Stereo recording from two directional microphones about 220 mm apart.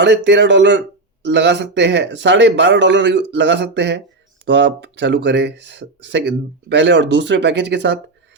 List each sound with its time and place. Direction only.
0.0 s speech: 50° right (ahead or behind)